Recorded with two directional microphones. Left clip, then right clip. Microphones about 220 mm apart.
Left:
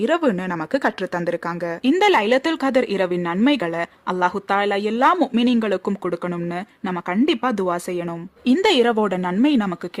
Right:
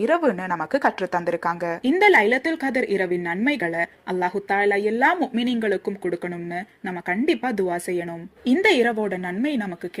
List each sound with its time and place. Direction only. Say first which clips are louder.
0.0 s speech: left 1 dB; 40° left (ahead or behind)
1.3 s speech: even; 20° left (ahead or behind)